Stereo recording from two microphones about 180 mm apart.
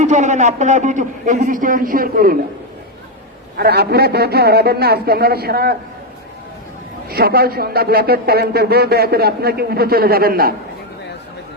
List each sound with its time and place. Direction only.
0.0 s a man's voice: 40° right (ahead or behind)
3.6 s speech: 60° right (ahead or behind)
7.1 s speech: 60° right (ahead or behind)